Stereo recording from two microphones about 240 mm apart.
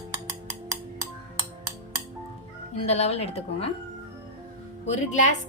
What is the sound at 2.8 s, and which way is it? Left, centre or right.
Speech, left.